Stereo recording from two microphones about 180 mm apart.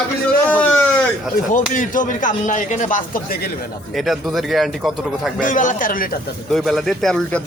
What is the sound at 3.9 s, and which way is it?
Speech, centre (ahead or behind).